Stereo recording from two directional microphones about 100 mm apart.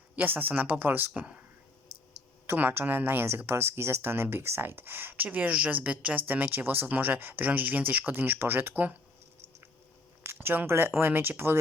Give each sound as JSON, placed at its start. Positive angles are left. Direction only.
{"t": 0.2, "sound": "speech", "side_deg": -20}
{"t": 2.5, "sound": "speech", "side_deg": -20}
{"t": 10.2, "sound": "speech", "side_deg": -20}